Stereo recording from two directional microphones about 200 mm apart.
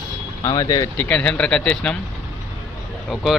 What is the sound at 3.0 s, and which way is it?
Speech, centre (ahead or behind).